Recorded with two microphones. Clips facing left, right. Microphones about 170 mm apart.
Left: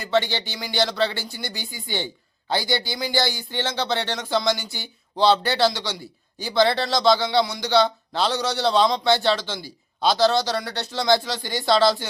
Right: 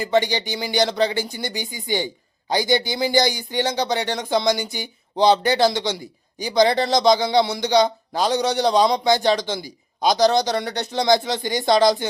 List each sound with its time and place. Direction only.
0.0 s speech: 15° right (ahead or behind)